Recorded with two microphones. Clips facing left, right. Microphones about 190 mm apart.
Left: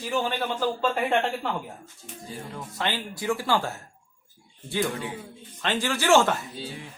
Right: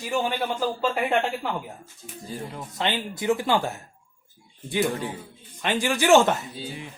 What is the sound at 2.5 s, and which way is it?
A man's voice, 20° right (ahead or behind).